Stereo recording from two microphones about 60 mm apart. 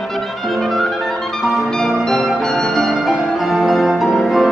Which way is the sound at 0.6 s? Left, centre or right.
Centre.